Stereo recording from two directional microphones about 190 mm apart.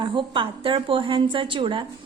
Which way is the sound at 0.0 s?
25° right (ahead or behind).